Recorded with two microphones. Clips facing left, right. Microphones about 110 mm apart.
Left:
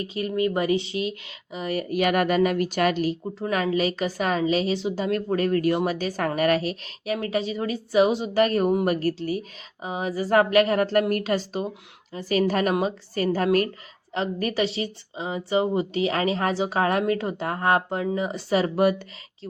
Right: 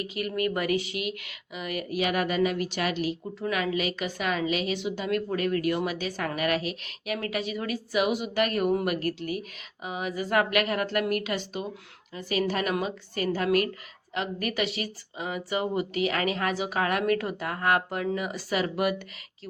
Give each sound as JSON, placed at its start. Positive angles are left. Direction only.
{"t": 0.0, "sound": "a woman's voice", "side_deg": 30}
{"t": 2.0, "sound": "a woman's voice", "side_deg": 50}